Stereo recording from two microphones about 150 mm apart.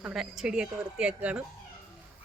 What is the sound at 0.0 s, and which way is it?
Speech, 5° right (ahead or behind).